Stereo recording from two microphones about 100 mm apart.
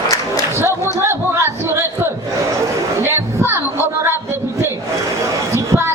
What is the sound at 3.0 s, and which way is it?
Music, 25° right (ahead or behind).